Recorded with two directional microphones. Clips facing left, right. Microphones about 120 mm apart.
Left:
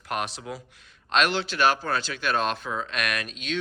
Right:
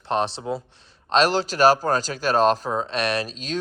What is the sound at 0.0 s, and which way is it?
Speech, 30° right (ahead or behind).